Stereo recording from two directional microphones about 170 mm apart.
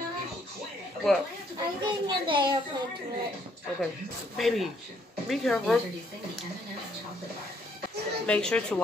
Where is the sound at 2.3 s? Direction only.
25° right (ahead or behind).